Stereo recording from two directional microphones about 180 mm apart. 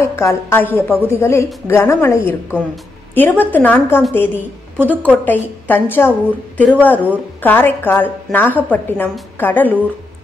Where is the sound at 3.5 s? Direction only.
10° left (ahead or behind).